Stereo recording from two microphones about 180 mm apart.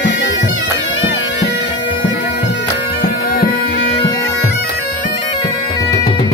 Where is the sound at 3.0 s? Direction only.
55° left (ahead or behind).